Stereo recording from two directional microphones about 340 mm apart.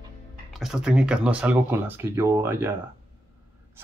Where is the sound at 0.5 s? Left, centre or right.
Centre.